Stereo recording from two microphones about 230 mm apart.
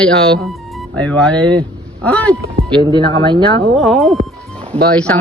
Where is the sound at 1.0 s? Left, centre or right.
Centre.